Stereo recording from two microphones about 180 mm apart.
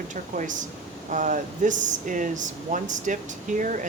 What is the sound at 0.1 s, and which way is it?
Speech, 45° right (ahead or behind).